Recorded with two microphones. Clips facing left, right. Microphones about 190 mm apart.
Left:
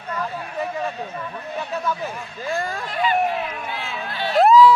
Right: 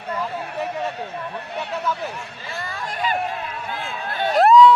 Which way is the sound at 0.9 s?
70° right (ahead or behind).